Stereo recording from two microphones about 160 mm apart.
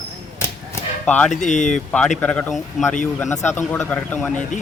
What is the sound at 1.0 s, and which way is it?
Speech, 10° left (ahead or behind).